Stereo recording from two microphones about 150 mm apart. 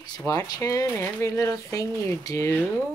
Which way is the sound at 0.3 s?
20° left (ahead or behind).